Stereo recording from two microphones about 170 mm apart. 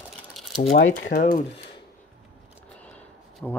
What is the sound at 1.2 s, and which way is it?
Speech, 50° left (ahead or behind).